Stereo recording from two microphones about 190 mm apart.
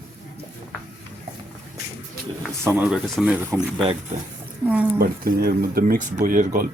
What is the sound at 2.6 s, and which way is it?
Speech, 10° right (ahead or behind).